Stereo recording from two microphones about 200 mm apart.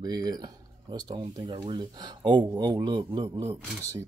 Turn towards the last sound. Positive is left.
turn(degrees=-15)  # may be behind; listen again after turning